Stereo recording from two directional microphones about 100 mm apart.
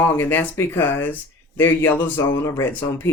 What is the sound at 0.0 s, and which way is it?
Speech, 20° left (ahead or behind).